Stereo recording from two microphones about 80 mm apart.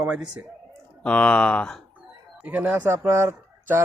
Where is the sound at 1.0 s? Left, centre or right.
Centre.